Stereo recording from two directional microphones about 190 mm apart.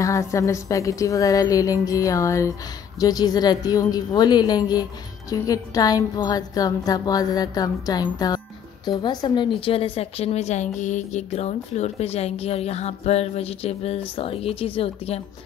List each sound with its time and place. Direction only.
0.0 s a woman's voice: 15° left (ahead or behind); by 15.2 s 30° left (ahead or behind)